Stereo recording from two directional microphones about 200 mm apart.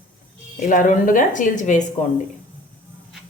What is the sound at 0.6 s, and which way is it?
Speech, 40° left (ahead or behind).